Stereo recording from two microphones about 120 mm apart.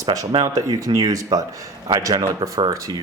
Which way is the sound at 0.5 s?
30° right (ahead or behind).